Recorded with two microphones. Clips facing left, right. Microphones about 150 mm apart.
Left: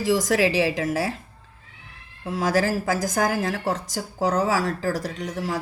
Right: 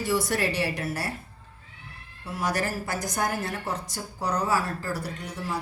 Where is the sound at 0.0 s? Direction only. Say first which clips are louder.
Left 6 dB; 90° left.